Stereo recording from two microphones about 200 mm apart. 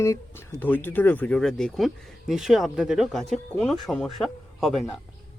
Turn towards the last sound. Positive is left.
turn(degrees=0)  # may be behind; listen again after turning